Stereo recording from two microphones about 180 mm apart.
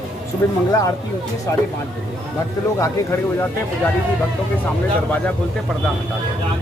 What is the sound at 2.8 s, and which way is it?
Speech, 15° left (ahead or behind).